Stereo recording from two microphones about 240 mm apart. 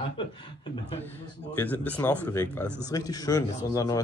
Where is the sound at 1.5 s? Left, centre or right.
Centre.